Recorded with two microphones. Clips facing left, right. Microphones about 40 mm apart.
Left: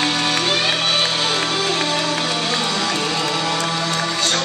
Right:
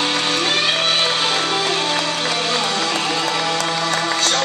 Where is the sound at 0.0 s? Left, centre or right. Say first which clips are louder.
Even; centre.